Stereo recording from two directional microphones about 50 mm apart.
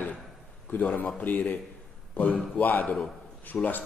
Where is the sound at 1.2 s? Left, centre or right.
Left.